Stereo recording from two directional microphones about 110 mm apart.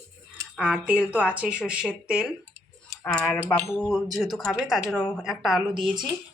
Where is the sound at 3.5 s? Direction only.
5° left (ahead or behind).